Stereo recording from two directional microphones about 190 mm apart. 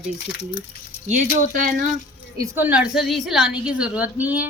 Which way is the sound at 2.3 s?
15° right (ahead or behind).